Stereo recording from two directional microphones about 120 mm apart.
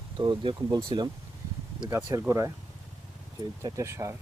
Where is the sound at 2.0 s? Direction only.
25° right (ahead or behind).